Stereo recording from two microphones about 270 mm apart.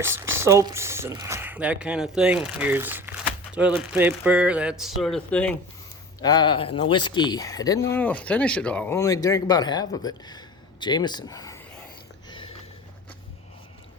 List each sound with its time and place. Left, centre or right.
0.0 s speech: centre
6.2 s speech: centre
12.3 s a sound: centre